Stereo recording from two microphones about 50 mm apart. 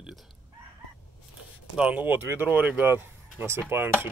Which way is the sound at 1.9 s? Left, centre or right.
Right.